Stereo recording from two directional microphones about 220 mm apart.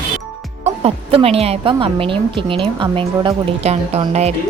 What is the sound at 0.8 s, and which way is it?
Speech, 25° right (ahead or behind).